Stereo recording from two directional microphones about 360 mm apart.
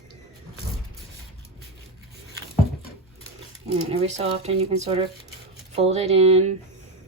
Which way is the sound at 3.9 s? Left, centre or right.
Centre.